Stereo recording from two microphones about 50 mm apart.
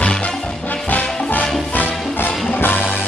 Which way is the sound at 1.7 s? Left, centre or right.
Left.